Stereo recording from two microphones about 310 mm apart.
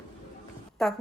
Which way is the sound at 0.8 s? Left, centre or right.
Centre.